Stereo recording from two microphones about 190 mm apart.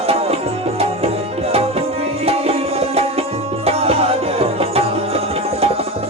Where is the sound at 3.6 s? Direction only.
30° right (ahead or behind).